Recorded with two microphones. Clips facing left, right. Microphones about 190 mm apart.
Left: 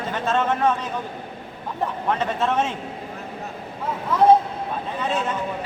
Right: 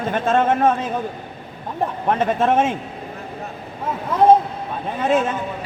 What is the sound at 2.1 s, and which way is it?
Speech, 50° right (ahead or behind).